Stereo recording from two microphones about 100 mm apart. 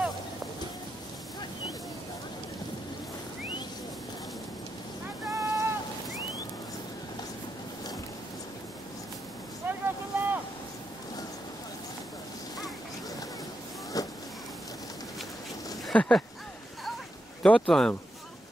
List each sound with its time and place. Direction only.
5.3 s boat: 30° right (ahead or behind)
9.7 s boat: 20° right (ahead or behind)
13.9 s insect: 40° left (ahead or behind)
15.9 s a sound: 10° left (ahead or behind)
17.4 s speech: 5° left (ahead or behind)